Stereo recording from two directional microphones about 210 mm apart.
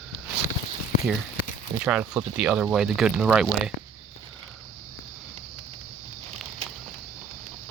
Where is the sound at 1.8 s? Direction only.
5° right (ahead or behind).